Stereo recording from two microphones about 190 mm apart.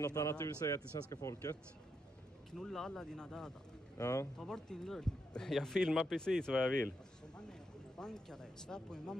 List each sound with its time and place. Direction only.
0.0 s a man's voice: 15° left (ahead or behind)
2.5 s speech: centre (ahead or behind)
4.0 s a man's voice: 15° left (ahead or behind)
4.4 s speech: 5° left (ahead or behind)
8.0 s speech: 5° left (ahead or behind)